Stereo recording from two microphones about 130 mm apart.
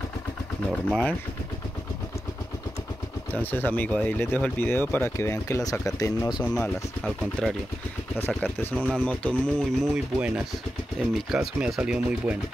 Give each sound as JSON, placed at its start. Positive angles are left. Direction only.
{"t": 0.8, "sound": "speech", "side_deg": 5}
{"t": 3.4, "sound": "speech", "side_deg": 15}
{"t": 6.4, "sound": "speech", "side_deg": 5}
{"t": 9.9, "sound": "speech", "side_deg": -10}